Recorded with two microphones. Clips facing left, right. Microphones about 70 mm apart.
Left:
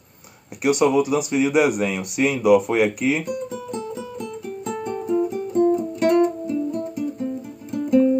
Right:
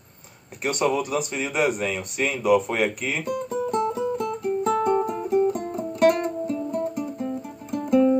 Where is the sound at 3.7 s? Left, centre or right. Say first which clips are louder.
Right 6 dB; right.